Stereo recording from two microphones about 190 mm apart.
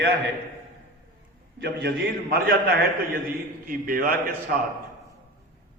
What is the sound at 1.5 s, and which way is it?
Speech, 55° right (ahead or behind).